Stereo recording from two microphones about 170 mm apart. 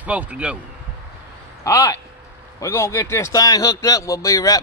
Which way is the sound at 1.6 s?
20° left (ahead or behind).